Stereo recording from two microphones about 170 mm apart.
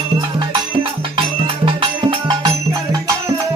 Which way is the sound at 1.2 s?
30° right (ahead or behind).